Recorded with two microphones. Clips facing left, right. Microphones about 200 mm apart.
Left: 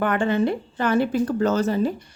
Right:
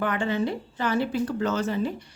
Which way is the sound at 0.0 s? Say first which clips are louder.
Left 5 dB; 55° left (ahead or behind).